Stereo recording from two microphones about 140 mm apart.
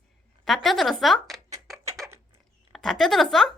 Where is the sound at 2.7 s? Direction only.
Centre (ahead or behind).